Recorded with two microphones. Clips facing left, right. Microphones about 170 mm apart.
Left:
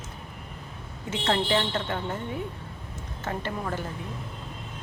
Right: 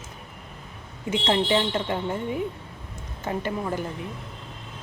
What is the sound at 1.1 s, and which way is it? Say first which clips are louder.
Speech: right 3 dB; 15° right (ahead or behind).